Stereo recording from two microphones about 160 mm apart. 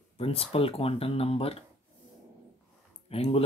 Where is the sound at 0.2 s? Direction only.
35° left (ahead or behind).